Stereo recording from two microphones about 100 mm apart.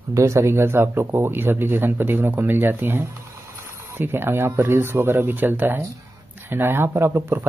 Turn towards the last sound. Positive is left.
turn(degrees=-25)  # may be behind; listen again after turning